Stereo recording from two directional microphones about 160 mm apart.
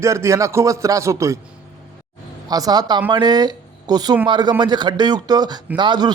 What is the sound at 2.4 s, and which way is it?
A man's voice, 25° right (ahead or behind).